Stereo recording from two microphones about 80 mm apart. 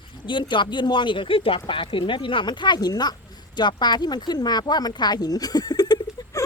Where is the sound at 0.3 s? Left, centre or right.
Left.